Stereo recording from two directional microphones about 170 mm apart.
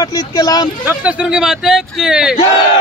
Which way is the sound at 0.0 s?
20° left (ahead or behind).